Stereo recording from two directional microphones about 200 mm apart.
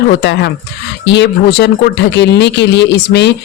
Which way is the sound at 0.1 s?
55° left (ahead or behind).